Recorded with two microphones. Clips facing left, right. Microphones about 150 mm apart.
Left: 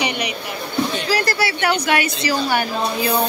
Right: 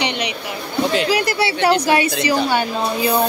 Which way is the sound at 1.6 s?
30° right (ahead or behind).